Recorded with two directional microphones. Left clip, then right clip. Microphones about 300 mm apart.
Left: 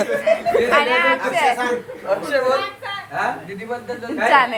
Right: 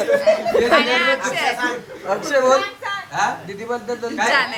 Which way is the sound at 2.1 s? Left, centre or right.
Right.